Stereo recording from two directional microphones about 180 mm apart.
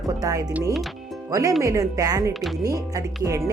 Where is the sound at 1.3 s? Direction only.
20° right (ahead or behind).